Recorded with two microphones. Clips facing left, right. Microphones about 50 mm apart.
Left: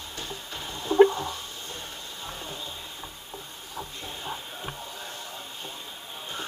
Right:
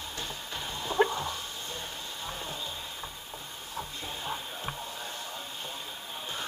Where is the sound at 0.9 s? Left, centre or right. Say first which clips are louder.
Left 9 dB; centre.